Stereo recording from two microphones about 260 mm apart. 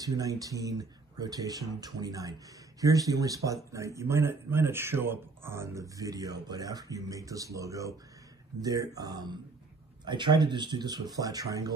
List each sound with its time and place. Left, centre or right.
0.0 s a man's voice: centre